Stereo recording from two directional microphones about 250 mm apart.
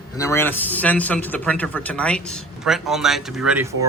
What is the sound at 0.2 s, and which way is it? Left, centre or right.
Speech, centre.